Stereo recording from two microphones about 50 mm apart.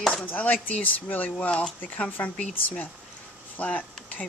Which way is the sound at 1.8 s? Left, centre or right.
Left.